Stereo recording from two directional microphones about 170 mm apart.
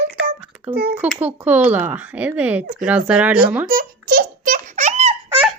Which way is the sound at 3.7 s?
60° right (ahead or behind).